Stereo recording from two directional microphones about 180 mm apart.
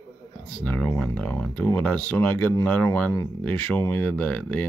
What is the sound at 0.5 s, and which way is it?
A man's voice, 10° left (ahead or behind).